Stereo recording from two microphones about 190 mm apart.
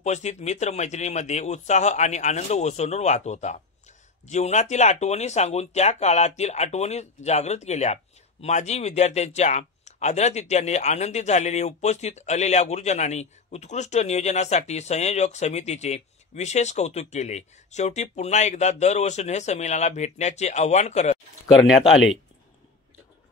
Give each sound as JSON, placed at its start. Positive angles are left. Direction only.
{"t": 0.0, "sound": "a man's voice", "side_deg": 35}
{"t": 21.5, "sound": "speech", "side_deg": 0}